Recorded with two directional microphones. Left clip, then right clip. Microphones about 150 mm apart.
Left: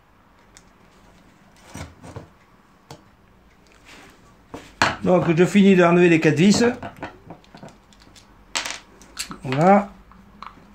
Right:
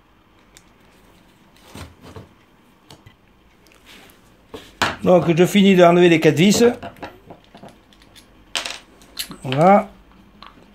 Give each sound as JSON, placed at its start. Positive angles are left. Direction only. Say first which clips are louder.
{"t": 5.0, "sound": "speech", "louder": "right 6 dB", "side_deg": -35}
{"t": 7.6, "sound": "coin", "louder": "right 1 dB", "side_deg": 15}
{"t": 9.4, "sound": "squish", "louder": "right 3 dB", "side_deg": -25}